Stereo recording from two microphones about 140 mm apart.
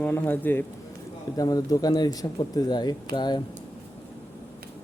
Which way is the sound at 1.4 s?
25° left (ahead or behind).